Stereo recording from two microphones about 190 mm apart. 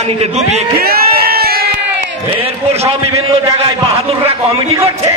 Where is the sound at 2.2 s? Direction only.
30° right (ahead or behind).